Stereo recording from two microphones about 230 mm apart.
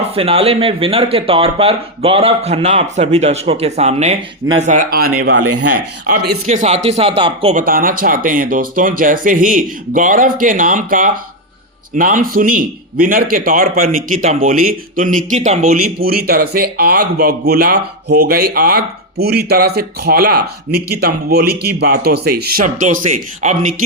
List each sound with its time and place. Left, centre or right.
0.1 s speech: right
5.4 s speech: right
6.2 s speech: right
7.5 s a man's voice: right